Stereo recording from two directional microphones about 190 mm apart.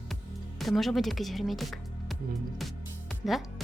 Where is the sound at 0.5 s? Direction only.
Centre (ahead or behind).